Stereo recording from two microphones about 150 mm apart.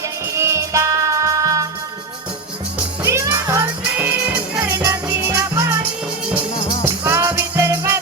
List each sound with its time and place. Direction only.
0.3 s music: 20° right (ahead or behind)
3.0 s music: 20° right (ahead or behind)
4.7 s music: 20° right (ahead or behind)
6.8 s music: 15° right (ahead or behind)